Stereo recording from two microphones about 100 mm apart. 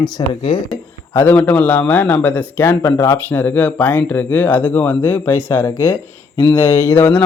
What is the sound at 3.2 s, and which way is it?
Speech, 20° left (ahead or behind).